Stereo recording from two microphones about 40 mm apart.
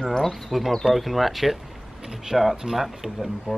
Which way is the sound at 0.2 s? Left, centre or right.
Centre.